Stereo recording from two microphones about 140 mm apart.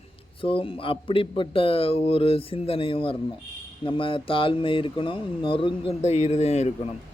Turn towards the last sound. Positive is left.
turn(degrees=50)  # may be behind; listen again after turning